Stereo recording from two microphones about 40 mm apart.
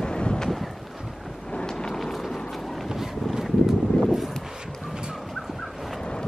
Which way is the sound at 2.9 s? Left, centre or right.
Centre.